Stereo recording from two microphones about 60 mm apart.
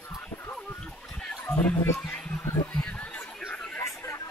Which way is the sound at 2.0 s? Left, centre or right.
Centre.